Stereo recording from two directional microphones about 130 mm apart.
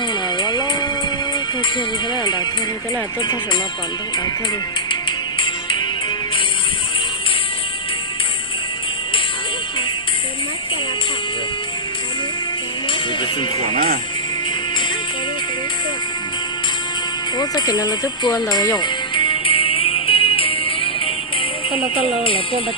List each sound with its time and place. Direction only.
0.3 s music: 35° left (ahead or behind)
4.9 s music: 40° left (ahead or behind)
17.3 s speech: 30° left (ahead or behind)
18.8 s music: 40° left (ahead or behind)
22.0 s speech: 45° left (ahead or behind)